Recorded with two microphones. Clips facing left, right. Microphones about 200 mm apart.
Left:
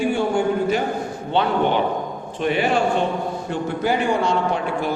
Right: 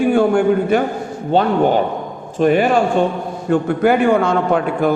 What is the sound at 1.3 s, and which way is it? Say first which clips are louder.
A man's voice: right 6 dB; 45° right (ahead or behind).